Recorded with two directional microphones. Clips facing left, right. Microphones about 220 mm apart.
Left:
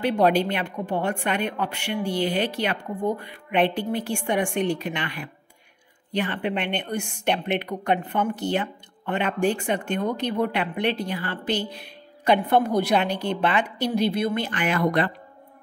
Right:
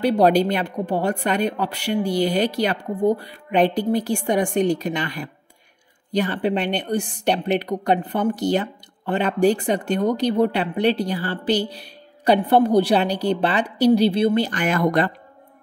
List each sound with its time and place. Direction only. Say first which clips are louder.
0.0 s a woman's voice: right 4 dB; 40° right (ahead or behind)